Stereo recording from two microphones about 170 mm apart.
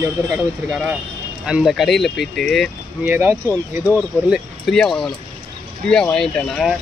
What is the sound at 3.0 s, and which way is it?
Speech, 10° right (ahead or behind).